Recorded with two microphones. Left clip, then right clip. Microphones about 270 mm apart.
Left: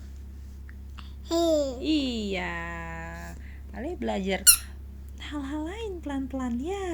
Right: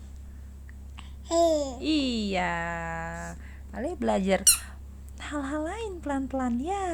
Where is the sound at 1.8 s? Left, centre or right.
Right.